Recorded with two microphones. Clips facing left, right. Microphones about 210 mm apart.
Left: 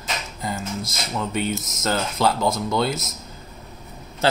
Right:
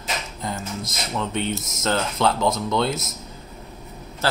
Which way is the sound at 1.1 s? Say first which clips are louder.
Left 1 dB; 5° left (ahead or behind).